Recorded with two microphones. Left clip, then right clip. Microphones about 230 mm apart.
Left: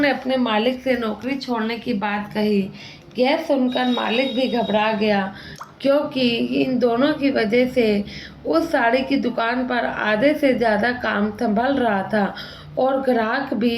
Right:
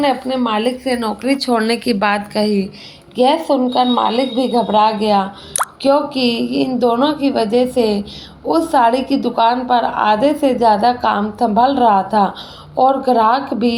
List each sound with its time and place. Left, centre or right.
0.0 s a woman's voice: right
1.2 s a woman's voice: right
5.9 s a woman's voice: centre